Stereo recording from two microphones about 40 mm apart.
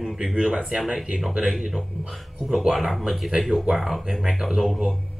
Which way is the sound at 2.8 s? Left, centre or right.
Centre.